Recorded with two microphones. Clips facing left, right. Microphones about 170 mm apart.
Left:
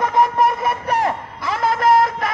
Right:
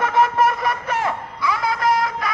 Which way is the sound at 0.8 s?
35° left (ahead or behind).